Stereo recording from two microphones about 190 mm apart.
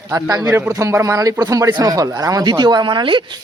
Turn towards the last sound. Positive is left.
turn(degrees=-25)  # may be behind; listen again after turning